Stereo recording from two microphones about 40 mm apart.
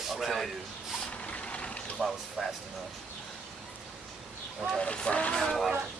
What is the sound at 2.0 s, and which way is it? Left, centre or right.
Speech, centre.